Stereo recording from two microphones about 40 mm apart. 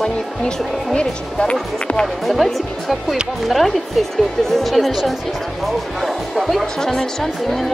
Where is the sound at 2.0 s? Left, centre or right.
Centre.